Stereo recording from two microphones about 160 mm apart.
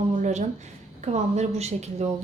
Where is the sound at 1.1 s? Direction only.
45° right (ahead or behind).